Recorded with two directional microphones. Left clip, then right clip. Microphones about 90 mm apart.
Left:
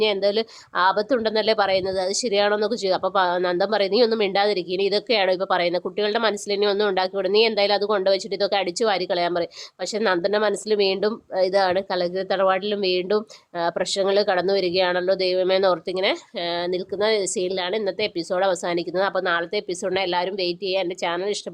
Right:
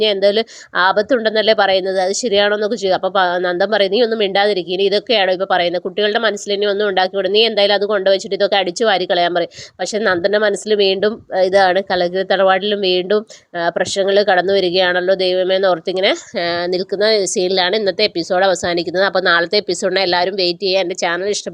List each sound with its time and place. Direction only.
0.0 s a woman's voice: 35° right (ahead or behind)
15.9 s a woman's voice: 55° right (ahead or behind)
16.6 s a woman's voice: 65° right (ahead or behind)
17.1 s a woman's voice: 45° right (ahead or behind)
17.5 s a woman's voice: 70° right (ahead or behind)
18.3 s a woman's voice: 45° right (ahead or behind)
19.3 s a woman's voice: 65° right (ahead or behind)
19.8 s a woman's voice: 45° right (ahead or behind)